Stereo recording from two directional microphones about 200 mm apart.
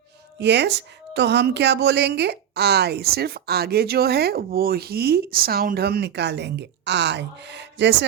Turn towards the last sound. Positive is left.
turn(degrees=-60)  # may be behind; listen again after turning